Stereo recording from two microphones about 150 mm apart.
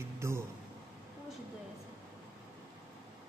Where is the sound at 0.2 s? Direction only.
20° right (ahead or behind).